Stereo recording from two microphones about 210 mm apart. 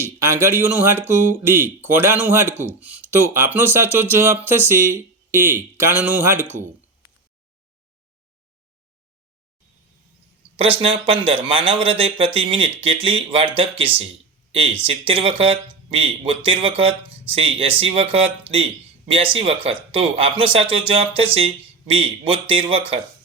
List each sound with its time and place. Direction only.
0.0 s speech: 10° right (ahead or behind)
10.6 s speech: 25° right (ahead or behind)